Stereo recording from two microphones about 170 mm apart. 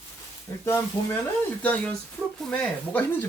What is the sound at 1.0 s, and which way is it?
Speech, 30° left (ahead or behind).